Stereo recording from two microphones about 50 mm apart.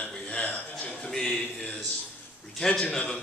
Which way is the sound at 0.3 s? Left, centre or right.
Left.